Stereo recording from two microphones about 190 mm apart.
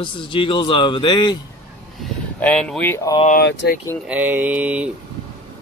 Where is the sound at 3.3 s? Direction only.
60° left (ahead or behind).